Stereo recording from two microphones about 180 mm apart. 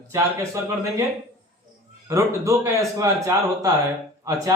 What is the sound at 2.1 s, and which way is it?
A man's voice, 15° right (ahead or behind).